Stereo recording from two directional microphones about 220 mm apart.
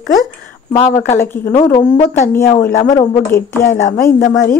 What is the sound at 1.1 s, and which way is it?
A woman's voice, 10° left (ahead or behind).